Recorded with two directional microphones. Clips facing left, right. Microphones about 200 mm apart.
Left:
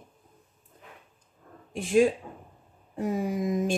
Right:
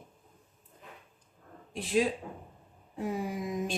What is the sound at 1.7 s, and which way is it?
Speech, 50° left (ahead or behind).